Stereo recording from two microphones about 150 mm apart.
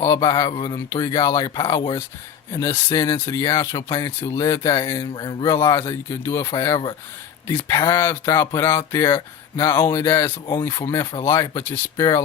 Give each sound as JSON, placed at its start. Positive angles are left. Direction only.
{"t": 0.0, "sound": "speech", "side_deg": 20}
{"t": 5.5, "sound": "speech", "side_deg": 15}
{"t": 10.9, "sound": "speech", "side_deg": 30}
{"t": 11.3, "sound": "speech", "side_deg": 20}